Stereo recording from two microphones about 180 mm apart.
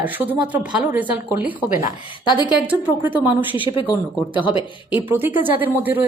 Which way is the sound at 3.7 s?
25° left (ahead or behind).